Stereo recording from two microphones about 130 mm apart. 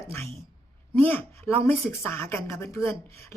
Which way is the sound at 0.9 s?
15° left (ahead or behind).